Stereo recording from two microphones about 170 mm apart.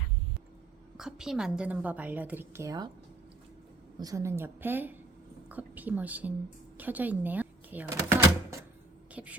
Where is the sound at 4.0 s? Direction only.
20° right (ahead or behind).